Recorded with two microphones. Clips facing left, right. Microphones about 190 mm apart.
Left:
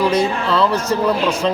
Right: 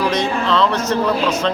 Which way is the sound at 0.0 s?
10° left (ahead or behind).